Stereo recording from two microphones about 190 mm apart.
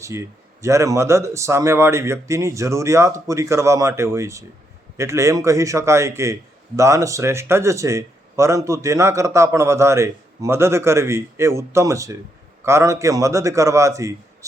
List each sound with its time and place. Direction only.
0.0 s speech: 15° right (ahead or behind)